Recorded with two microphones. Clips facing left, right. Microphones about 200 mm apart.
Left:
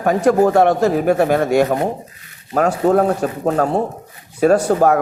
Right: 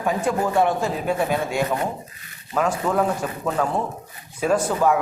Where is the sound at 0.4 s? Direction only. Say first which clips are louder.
Left 7 dB; 70° left (ahead or behind).